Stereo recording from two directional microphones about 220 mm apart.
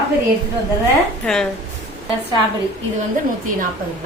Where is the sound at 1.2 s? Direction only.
Centre (ahead or behind).